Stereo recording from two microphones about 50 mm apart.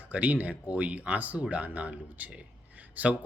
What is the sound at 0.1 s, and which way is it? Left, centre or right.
A man's voice, right.